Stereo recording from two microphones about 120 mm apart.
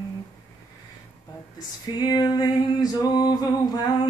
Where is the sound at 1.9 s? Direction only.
35° left (ahead or behind).